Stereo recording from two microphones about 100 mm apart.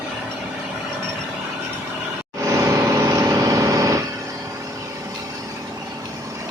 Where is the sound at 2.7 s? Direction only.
30° right (ahead or behind).